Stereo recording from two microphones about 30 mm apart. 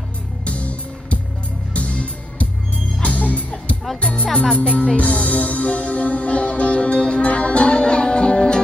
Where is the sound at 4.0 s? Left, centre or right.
Left.